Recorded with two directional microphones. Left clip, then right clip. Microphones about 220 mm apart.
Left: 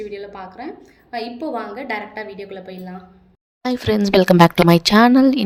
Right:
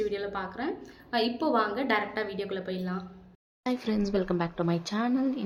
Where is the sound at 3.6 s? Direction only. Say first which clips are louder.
Left 11 dB; 35° left (ahead or behind).